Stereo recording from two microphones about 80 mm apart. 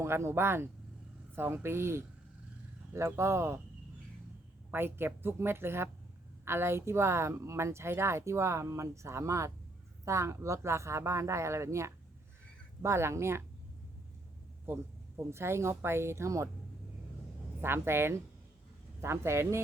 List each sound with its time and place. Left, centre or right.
0.0 s speech: right
3.2 s speech: right
4.7 s speech: right
14.7 s speech: right
17.6 s speech: right